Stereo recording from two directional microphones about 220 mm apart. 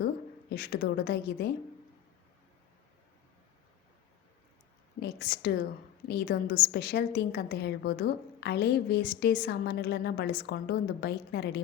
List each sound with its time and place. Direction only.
0.5 s a woman's voice: 45° left (ahead or behind)
4.9 s a woman's voice: 45° left (ahead or behind)